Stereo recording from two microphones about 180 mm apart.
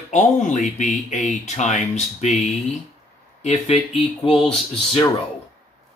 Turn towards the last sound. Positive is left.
turn(degrees=30)  # may be behind; listen again after turning